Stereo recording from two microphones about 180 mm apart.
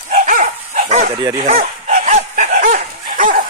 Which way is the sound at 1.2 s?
25° right (ahead or behind).